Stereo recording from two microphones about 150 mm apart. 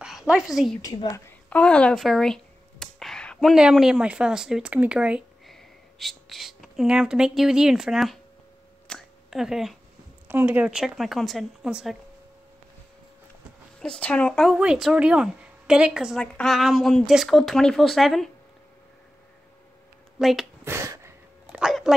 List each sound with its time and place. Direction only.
0.0 s a woman's voice: 5° right (ahead or behind)
0.8 s a woman's voice: 25° left (ahead or behind)
1.5 s speech: 5° left (ahead or behind)
8.8 s a sound: centre (ahead or behind)
10.2 s a woman's voice: 15° right (ahead or behind)
13.7 s speech: 5° left (ahead or behind)
14.5 s a woman's voice: 5° right (ahead or behind)
20.2 s speech: centre (ahead or behind)
20.6 s a sound: 20° right (ahead or behind)
21.5 s a sound: 5° right (ahead or behind)